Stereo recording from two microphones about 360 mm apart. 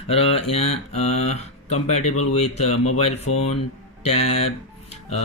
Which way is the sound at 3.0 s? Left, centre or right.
Centre.